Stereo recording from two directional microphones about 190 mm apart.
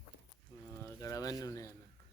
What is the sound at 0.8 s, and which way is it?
Speech, 20° left (ahead or behind).